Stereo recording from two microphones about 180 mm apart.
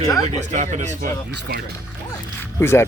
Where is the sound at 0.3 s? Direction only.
40° right (ahead or behind).